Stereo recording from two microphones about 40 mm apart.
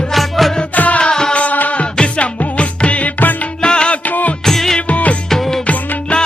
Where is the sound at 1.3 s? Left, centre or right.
Left.